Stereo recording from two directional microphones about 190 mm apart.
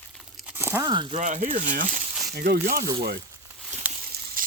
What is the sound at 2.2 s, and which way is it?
Speech, 55° right (ahead or behind).